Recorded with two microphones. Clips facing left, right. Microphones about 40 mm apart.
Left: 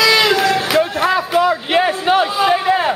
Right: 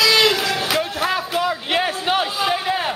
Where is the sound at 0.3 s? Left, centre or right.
Centre.